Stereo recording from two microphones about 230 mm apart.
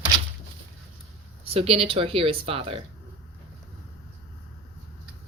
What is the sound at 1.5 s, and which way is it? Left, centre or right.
A woman's voice, right.